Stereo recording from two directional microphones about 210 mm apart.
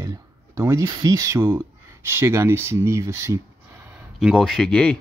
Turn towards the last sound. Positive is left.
turn(degrees=5)  # may be behind; listen again after turning